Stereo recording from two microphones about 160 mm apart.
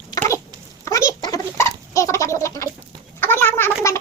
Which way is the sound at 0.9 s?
20° left (ahead or behind).